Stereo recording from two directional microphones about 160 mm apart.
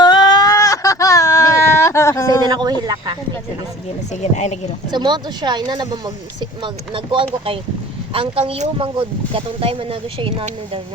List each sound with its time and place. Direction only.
0.0 s a sound: 25° left (ahead or behind)
2.5 s speech: 25° right (ahead or behind)
4.1 s speech: 45° left (ahead or behind)
4.9 s speech: 25° right (ahead or behind)